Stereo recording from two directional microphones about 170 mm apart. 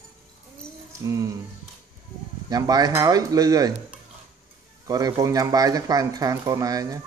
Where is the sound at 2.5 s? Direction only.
20° right (ahead or behind).